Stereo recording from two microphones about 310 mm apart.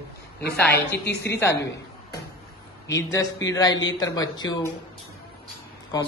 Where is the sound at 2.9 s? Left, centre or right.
Centre.